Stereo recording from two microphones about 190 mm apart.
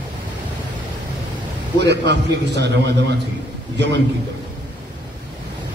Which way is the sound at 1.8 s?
65° right (ahead or behind).